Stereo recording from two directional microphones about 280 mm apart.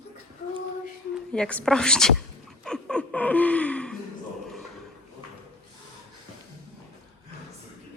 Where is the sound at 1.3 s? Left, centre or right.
Centre.